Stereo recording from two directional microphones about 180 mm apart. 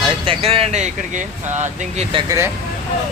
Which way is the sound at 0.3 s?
30° right (ahead or behind).